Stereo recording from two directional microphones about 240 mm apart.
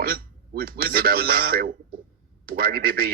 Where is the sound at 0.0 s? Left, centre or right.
Right.